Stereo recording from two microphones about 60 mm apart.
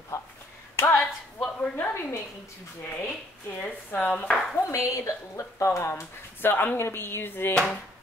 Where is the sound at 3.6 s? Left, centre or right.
Left.